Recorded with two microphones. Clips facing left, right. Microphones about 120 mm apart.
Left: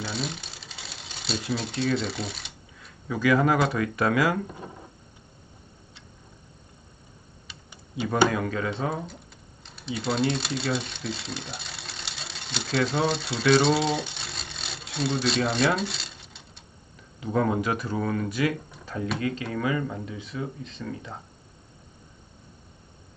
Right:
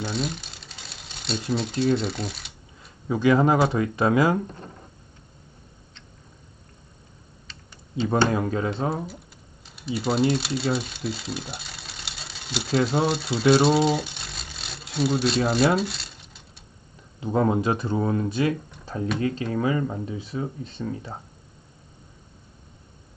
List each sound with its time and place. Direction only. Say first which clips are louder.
0.0 s a sound: right 4 dB; centre (ahead or behind)
2.0 s speech: right 2 dB; centre (ahead or behind)
3.1 s speech: right 3 dB; 25° right (ahead or behind)
4.4 s speech: left 1 dB; 10° left (ahead or behind)
7.4 s tick-tock: even; 10° left (ahead or behind)
8.3 s speech: right 3 dB; 30° right (ahead or behind)
9.6 s speech: right 3 dB; 5° right (ahead or behind)
13.6 s a sound: right 3 dB; 5° right (ahead or behind)
17.2 s speech: right 3 dB; 25° right (ahead or behind)